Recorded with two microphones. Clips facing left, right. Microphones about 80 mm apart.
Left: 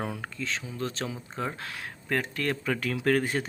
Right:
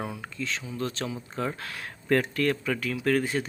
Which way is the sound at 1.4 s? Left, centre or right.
Left.